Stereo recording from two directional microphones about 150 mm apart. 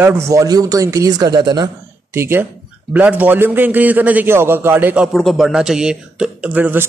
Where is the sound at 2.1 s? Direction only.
15° right (ahead or behind).